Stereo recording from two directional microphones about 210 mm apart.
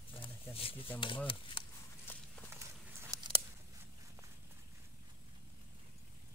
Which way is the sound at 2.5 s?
10° right (ahead or behind).